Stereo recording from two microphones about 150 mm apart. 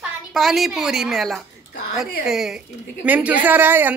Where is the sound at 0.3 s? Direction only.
Centre (ahead or behind).